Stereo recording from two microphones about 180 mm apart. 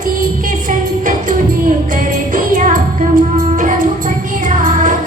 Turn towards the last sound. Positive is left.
turn(degrees=-45)  # may be behind; listen again after turning